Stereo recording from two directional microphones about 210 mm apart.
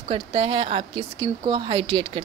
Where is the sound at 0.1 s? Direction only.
25° right (ahead or behind).